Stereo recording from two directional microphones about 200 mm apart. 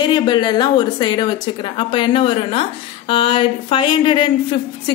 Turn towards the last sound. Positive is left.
turn(degrees=25)  # may be behind; listen again after turning